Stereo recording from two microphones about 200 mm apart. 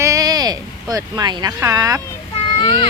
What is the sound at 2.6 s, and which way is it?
Speech, 20° left (ahead or behind).